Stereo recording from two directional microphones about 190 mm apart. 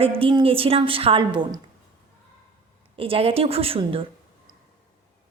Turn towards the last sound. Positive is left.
turn(degrees=-30)  # may be behind; listen again after turning